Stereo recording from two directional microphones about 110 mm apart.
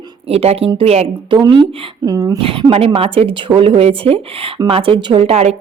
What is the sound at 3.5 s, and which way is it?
A woman's voice, 65° right (ahead or behind).